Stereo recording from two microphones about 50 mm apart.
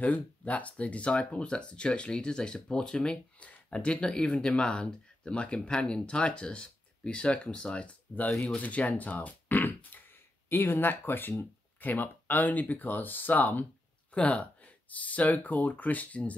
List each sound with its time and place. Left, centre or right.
0.0 s speech: left
9.8 s a sound: left
11.8 s speech: left
14.1 s speech: left